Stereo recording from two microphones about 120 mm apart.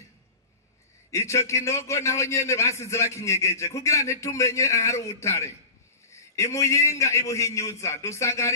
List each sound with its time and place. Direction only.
1.1 s a man's voice: 25° left (ahead or behind)